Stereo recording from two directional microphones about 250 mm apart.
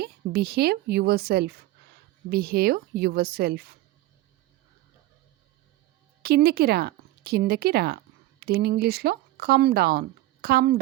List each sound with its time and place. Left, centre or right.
0.0 s a woman's voice: right
6.2 s speech: right